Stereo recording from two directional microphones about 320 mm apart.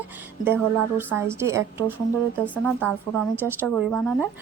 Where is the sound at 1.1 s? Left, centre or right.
Centre.